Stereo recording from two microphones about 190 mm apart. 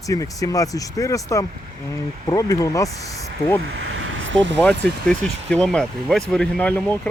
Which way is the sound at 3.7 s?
90° right.